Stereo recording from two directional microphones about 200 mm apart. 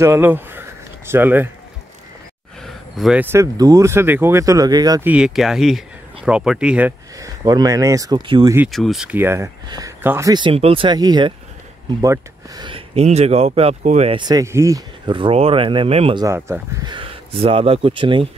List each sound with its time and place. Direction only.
0.0 s a sound: 10° right (ahead or behind)
2.6 s speech: centre (ahead or behind); by 5.0 s 20° right (ahead or behind)
5.0 s speech: 5° right (ahead or behind)
7.2 s speech: 20° right (ahead or behind)
8.6 s speech: centre (ahead or behind); by 16.3 s 30° right (ahead or behind)
16.3 s speech: 10° right (ahead or behind)